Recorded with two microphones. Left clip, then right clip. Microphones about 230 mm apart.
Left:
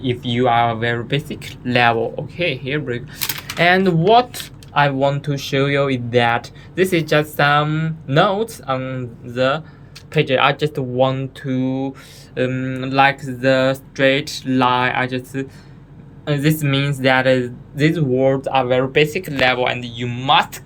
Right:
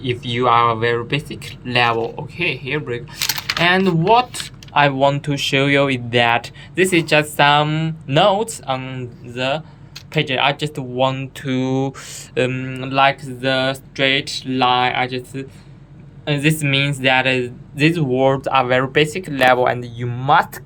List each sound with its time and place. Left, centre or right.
0.0 s speech: centre
4.7 s speech: centre
11.5 s speech: centre
16.2 s speech: centre
19.5 s speech: right